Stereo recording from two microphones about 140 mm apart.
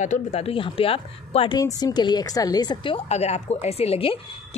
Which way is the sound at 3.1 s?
50° left (ahead or behind).